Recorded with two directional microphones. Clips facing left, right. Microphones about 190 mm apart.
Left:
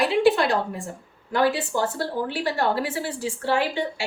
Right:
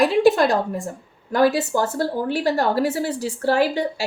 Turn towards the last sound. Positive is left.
turn(degrees=-40)  # may be behind; listen again after turning